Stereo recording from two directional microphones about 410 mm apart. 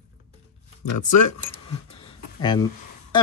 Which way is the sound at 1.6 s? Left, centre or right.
Centre.